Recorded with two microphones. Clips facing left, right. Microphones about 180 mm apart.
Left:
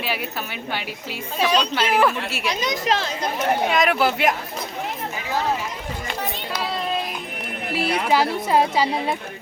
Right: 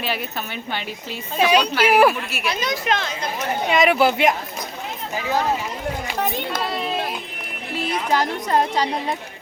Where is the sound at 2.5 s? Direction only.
15° left (ahead or behind).